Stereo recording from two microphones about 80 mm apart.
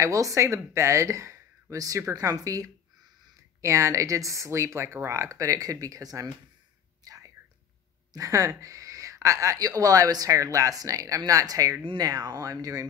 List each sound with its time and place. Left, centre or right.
0.0 s speech: right
7.1 s whispering: right
8.1 s speech: right